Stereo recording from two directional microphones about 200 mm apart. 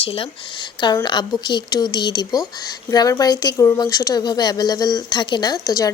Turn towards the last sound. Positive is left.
turn(degrees=20)  # may be behind; listen again after turning